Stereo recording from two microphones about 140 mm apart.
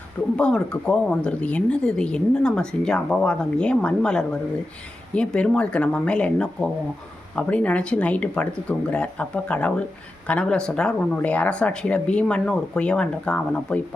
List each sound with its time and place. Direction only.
0.3 s speech: 5° left (ahead or behind)